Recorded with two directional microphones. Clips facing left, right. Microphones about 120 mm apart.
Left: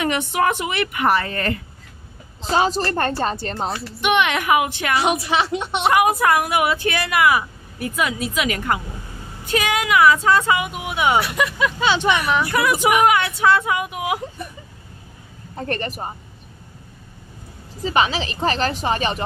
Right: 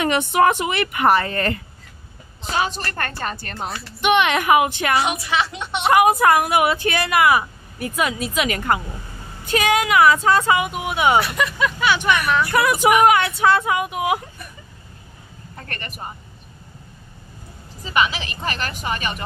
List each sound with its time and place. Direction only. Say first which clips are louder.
0.0 s speech: right 3 dB; 35° right (ahead or behind)
2.5 s a woman's voice: left 5 dB; 30° left (ahead or behind)
4.0 s speech: right 2 dB; 30° right (ahead or behind)
5.0 s a woman's voice: left 3 dB; 35° left (ahead or behind)
5.9 s speech: right 2 dB; 40° right (ahead or behind)
11.3 s speech: left 1 dB; 15° left (ahead or behind)
13.0 s speech: right 1 dB; 40° right (ahead or behind)
15.5 s a woman's voice: left 10 dB; 30° left (ahead or behind)
17.8 s a woman's voice: left 2 dB; 30° left (ahead or behind)